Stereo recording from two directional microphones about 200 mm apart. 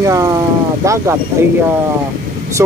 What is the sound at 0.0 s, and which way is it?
Speech, 15° right (ahead or behind).